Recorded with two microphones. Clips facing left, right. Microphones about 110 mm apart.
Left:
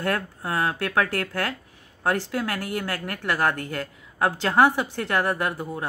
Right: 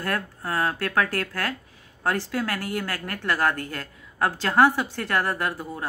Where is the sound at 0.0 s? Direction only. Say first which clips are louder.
Left 2 dB; 15° left (ahead or behind).